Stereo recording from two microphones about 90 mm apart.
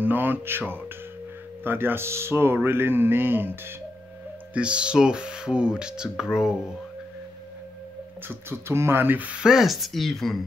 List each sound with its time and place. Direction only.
0.0 s speech: 20° right (ahead or behind)
4.6 s speech: 10° right (ahead or behind)
8.3 s speech: 30° right (ahead or behind); by 10.4 s 5° left (ahead or behind)